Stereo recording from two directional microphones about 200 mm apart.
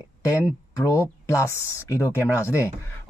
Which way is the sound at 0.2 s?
15° left (ahead or behind).